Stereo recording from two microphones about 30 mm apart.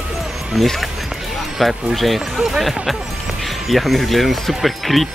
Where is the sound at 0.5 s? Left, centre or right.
Centre.